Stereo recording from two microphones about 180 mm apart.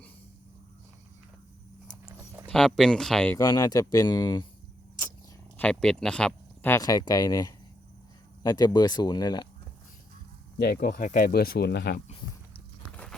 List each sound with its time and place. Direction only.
2.0 s a sound: 20° right (ahead or behind)
2.5 s speech: 5° left (ahead or behind)
3.3 s speech: 20° left (ahead or behind)
5.5 s speech: 5° left (ahead or behind); by 9.5 s 25° left (ahead or behind)
10.6 s speech: 60° left (ahead or behind)